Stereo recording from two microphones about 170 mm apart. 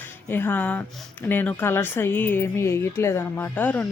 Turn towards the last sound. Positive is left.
turn(degrees=10)  # may be behind; listen again after turning